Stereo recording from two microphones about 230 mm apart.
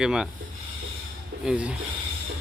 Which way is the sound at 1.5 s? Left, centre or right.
Centre.